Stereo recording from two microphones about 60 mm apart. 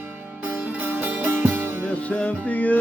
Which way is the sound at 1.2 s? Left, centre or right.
Right.